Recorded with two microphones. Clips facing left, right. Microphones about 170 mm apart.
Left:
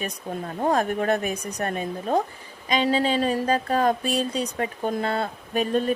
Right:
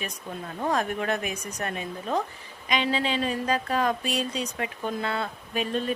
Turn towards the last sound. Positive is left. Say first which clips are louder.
# left 5 dB
turn(degrees=45)  # may be behind; listen again after turning